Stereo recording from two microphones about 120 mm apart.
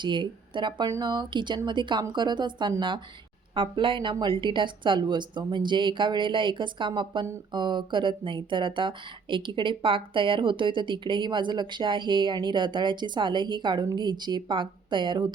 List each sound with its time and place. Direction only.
0.0 s speech: 40° right (ahead or behind)